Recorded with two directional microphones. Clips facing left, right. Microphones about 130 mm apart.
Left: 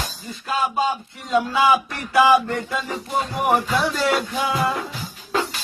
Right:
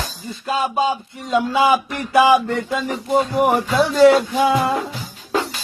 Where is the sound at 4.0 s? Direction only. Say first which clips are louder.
Right 10 dB; 25° right (ahead or behind).